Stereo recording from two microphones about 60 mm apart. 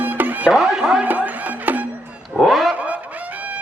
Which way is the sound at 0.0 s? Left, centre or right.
Right.